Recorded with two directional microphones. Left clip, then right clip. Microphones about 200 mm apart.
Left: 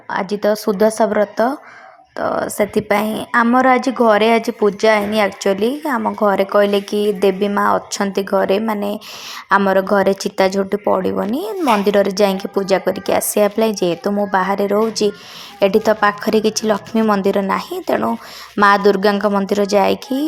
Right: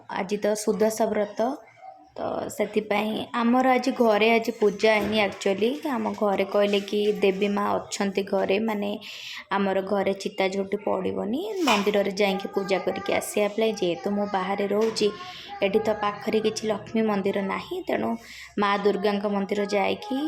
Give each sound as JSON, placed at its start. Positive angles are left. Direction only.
{"t": 0.1, "sound": "a woman's voice", "side_deg": 15}